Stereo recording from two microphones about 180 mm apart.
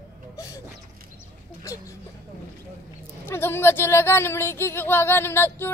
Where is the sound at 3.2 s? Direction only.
10° left (ahead or behind).